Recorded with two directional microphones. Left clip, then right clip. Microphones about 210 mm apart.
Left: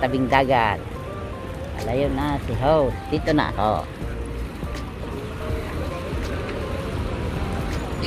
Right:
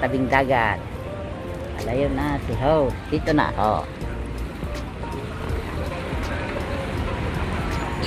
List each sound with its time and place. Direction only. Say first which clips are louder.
0.0 s speech: left 1 dB; 30° left (ahead or behind)
1.9 s speech: even; 25° left (ahead or behind)
3.3 s speech: right 2 dB; centre (ahead or behind)